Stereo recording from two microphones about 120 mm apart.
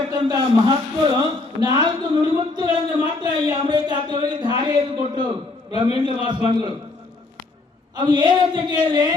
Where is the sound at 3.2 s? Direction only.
35° right (ahead or behind).